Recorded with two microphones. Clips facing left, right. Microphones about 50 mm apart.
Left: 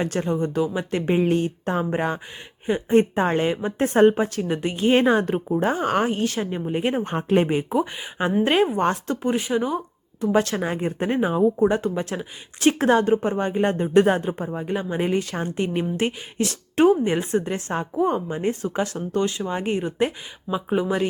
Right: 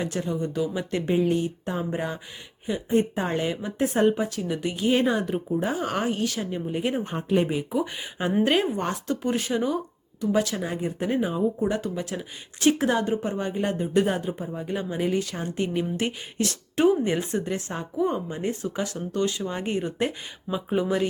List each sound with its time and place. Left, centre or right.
0.0 s a woman's voice: left
0.6 s speech: left
1.1 s a woman's voice: left
7.1 s speech: left
8.4 s speech: left
9.3 s speech: centre
9.7 s speech: left
11.7 s speech: left
13.9 s a woman's voice: left
14.6 s speech: left
20.5 s speech: centre